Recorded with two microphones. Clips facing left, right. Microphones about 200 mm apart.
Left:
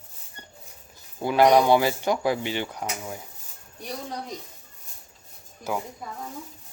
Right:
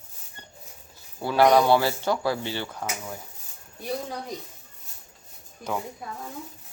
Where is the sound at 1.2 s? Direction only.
15° left (ahead or behind).